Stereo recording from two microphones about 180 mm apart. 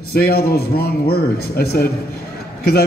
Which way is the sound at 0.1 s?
60° left (ahead or behind).